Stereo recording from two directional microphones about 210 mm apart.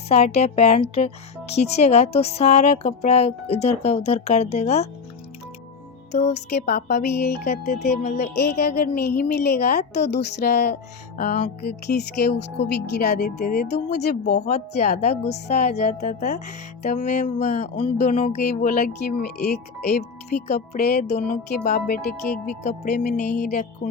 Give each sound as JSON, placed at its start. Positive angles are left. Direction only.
{"t": 0.1, "sound": "a woman's voice", "side_deg": 30}
{"t": 6.3, "sound": "speech", "side_deg": 50}
{"t": 7.9, "sound": "a woman's voice", "side_deg": 35}
{"t": 8.4, "sound": "speech", "side_deg": 50}
{"t": 15.0, "sound": "a woman's voice", "side_deg": 30}
{"t": 22.6, "sound": "a woman's voice", "side_deg": 35}